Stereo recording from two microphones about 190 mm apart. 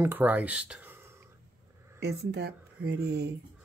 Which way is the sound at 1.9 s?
60° right (ahead or behind).